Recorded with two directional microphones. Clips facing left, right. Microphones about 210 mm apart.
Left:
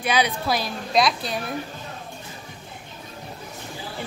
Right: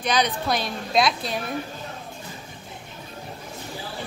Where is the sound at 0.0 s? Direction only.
10° left (ahead or behind).